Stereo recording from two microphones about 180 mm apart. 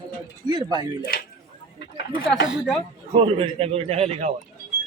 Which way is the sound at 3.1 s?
30° right (ahead or behind).